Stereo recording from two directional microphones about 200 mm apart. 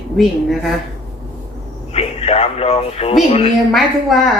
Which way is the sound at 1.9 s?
30° left (ahead or behind).